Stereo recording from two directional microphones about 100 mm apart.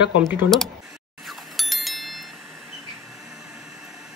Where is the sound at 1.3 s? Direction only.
Centre (ahead or behind).